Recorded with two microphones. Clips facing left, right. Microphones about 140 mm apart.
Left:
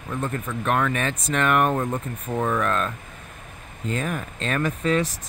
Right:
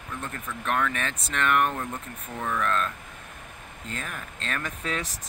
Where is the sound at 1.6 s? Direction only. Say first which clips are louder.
Left 7 dB; 45° left (ahead or behind).